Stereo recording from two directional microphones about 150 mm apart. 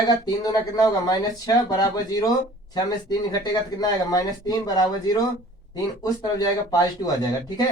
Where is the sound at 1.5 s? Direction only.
25° left (ahead or behind).